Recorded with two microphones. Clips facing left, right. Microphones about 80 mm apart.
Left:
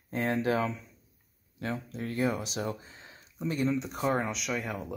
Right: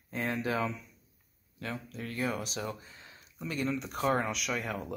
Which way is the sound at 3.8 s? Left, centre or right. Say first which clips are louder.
Even; centre.